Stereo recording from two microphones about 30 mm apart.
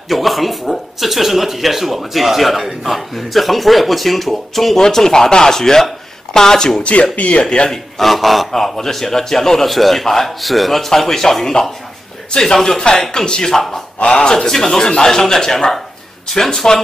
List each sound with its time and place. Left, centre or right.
0.1 s speech: centre
4.7 s a man's voice: centre
6.8 s speech: left
7.4 s a man's voice: left
8.0 s speech: centre
8.5 s a man's voice: centre
9.7 s a man's voice: centre; by 16.8 s left